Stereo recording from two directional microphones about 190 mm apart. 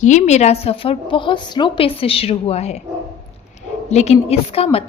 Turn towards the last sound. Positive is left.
turn(degrees=30)  # may be behind; listen again after turning